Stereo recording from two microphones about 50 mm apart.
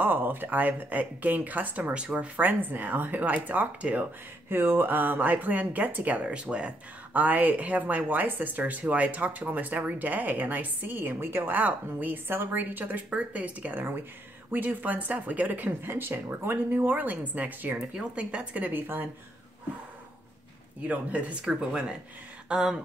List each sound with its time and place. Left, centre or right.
0.0 s speech: right
4.5 s speech: right
7.2 s speech: right
14.5 s speech: right
15.8 s speech: right
17.9 s speech: right
18.7 s speech: right
20.8 s speech: right
21.5 s speech: centre